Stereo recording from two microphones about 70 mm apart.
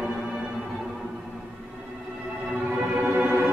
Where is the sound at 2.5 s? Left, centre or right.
Centre.